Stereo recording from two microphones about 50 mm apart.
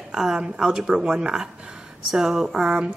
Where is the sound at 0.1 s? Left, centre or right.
Centre.